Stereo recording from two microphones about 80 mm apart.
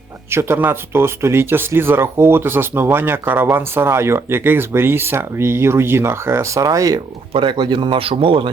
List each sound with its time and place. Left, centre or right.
0.3 s speech: right
7.3 s a man's voice: right